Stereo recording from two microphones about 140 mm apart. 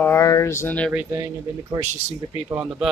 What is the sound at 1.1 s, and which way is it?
Speech, 20° right (ahead or behind).